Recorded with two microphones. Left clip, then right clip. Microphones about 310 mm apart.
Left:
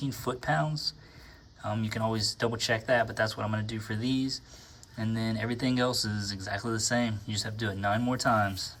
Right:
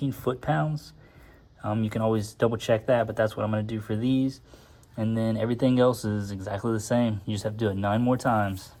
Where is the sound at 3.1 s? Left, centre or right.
Centre.